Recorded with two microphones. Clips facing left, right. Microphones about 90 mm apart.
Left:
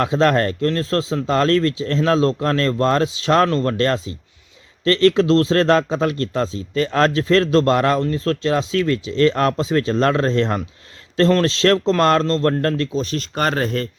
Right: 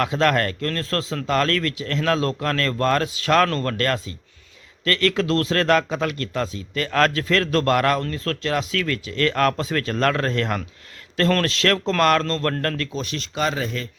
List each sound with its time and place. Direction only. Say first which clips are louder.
0.0 s a man's voice: left 3 dB; 25° left (ahead or behind)
13.3 s speech: left 4 dB; 55° left (ahead or behind)